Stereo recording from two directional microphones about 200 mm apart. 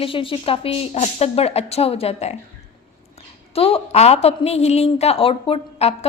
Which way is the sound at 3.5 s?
30° left (ahead or behind).